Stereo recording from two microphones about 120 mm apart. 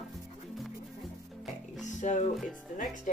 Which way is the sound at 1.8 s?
85° left.